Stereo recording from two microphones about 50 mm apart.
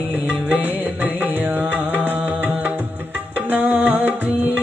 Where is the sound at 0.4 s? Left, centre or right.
Right.